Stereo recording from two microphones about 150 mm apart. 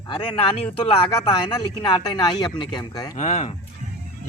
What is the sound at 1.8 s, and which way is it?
Speech, 30° left (ahead or behind).